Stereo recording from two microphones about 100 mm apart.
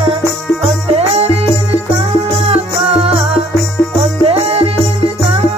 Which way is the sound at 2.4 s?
75° right (ahead or behind).